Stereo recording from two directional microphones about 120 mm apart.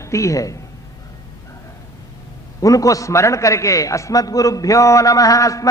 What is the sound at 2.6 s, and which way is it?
A man's voice, 30° left (ahead or behind).